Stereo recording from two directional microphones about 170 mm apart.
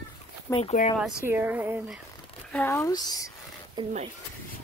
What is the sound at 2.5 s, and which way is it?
Speech, 10° left (ahead or behind).